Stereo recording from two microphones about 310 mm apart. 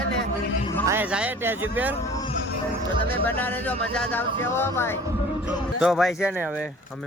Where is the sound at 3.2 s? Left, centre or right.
Centre.